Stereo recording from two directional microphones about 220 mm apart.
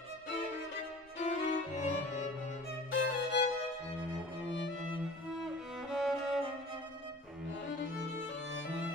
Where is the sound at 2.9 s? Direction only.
55° left (ahead or behind).